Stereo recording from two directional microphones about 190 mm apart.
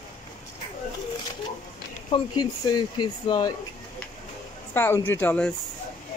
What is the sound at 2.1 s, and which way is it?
Speech, 20° left (ahead or behind).